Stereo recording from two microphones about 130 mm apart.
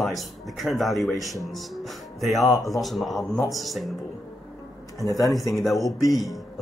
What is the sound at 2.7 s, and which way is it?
Speech, centre (ahead or behind).